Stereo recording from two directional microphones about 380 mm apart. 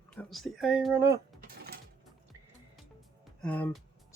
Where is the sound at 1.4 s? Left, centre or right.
Right.